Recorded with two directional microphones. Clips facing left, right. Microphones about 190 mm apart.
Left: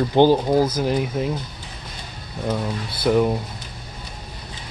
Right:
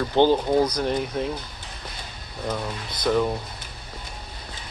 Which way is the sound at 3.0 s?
15° left (ahead or behind).